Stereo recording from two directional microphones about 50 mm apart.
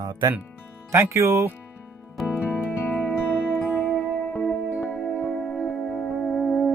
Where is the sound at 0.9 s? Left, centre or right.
Right.